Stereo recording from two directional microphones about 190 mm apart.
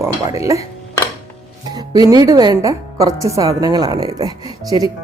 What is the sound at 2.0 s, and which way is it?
A woman's voice, 20° right (ahead or behind).